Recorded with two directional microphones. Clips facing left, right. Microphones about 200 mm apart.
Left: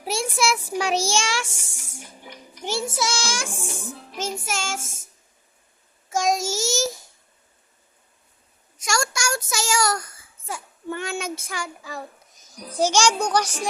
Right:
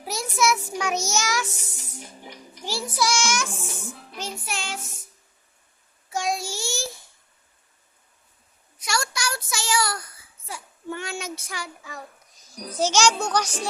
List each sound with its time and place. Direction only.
0.0 s a child's voice: 30° left (ahead or behind)
3.7 s music: 40° left (ahead or behind)
6.1 s child singing: 45° left (ahead or behind)
8.8 s child singing: 45° left (ahead or behind)
11.8 s a child's voice: 35° left (ahead or behind)
12.3 s a child's voice: 15° left (ahead or behind)